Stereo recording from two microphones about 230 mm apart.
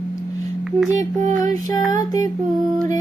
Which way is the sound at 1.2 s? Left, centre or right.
Right.